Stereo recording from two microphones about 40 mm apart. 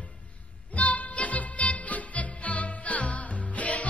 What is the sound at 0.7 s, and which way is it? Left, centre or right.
Music, left.